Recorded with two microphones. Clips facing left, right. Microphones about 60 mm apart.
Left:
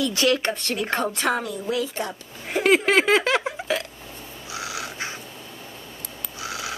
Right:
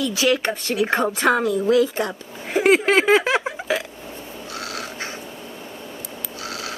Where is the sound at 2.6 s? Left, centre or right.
Centre.